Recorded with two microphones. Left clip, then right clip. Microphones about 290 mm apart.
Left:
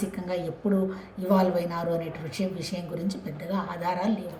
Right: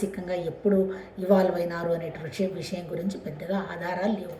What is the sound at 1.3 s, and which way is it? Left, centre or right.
A woman's voice, centre.